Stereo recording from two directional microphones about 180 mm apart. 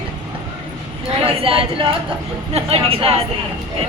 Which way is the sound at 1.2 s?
30° right (ahead or behind).